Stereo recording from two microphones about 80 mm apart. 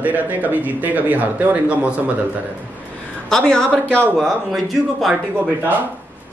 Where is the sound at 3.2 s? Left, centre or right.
Centre.